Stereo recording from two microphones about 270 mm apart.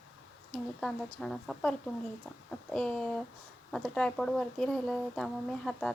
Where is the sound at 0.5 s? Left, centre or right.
Centre.